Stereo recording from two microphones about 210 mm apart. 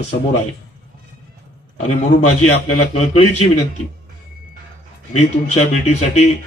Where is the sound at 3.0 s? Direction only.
30° left (ahead or behind).